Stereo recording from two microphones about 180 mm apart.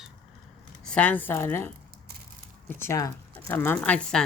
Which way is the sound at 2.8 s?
15° left (ahead or behind).